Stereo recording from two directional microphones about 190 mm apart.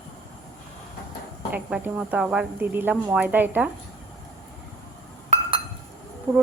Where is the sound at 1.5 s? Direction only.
10° right (ahead or behind).